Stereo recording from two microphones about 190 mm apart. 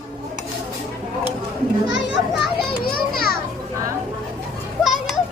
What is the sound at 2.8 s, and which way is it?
Children playing, 50° left (ahead or behind).